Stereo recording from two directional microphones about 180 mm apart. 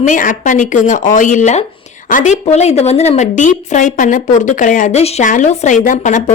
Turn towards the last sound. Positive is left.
turn(degrees=45)  # may be behind; listen again after turning